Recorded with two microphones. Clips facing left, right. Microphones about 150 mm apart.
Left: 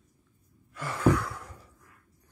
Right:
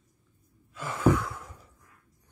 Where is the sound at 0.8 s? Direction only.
20° right (ahead or behind).